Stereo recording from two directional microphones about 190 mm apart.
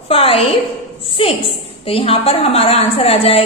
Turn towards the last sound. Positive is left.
turn(degrees=30)  # may be behind; listen again after turning